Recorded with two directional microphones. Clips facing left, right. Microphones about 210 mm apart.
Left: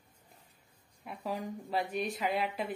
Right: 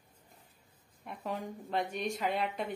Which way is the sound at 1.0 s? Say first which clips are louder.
Left 1 dB; centre (ahead or behind).